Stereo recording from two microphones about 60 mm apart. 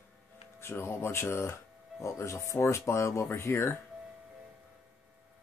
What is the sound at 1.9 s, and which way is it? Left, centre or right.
Speech, left.